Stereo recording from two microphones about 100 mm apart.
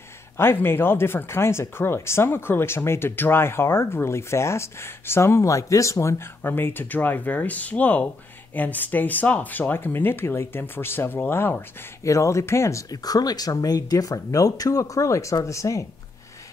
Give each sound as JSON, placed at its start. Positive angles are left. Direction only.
{"t": 0.4, "sound": "speech", "side_deg": 25}